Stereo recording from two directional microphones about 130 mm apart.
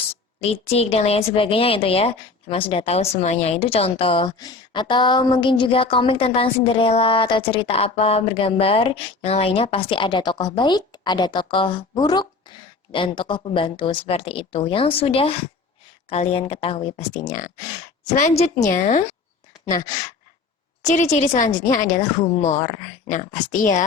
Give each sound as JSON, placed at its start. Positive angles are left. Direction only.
{"t": 0.4, "sound": "a woman's voice", "side_deg": 50}
{"t": 17.2, "sound": "a woman's voice", "side_deg": 75}
{"t": 20.8, "sound": "a woman's voice", "side_deg": 65}